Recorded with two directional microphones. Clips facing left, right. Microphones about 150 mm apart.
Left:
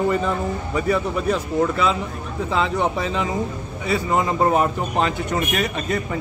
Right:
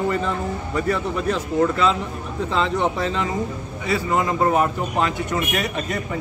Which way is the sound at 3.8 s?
25° left (ahead or behind).